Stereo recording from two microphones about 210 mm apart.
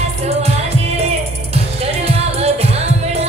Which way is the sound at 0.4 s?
30° right (ahead or behind).